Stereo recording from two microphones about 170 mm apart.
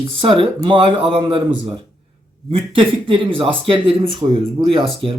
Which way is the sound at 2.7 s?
30° right (ahead or behind).